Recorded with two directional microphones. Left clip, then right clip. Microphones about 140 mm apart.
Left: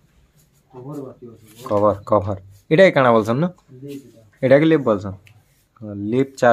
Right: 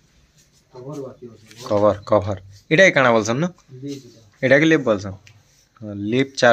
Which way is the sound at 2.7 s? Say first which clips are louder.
Left 1 dB; 20° left (ahead or behind).